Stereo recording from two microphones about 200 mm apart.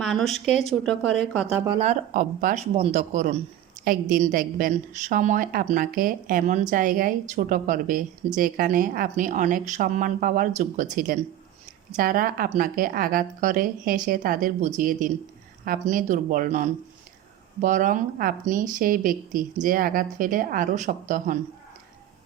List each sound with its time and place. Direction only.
0.0 s a sound: centre (ahead or behind)
0.3 s speech: 35° left (ahead or behind)
0.7 s speech: centre (ahead or behind)
1.6 s a woman's voice: 30° right (ahead or behind)
2.7 s a woman's voice: 30° right (ahead or behind)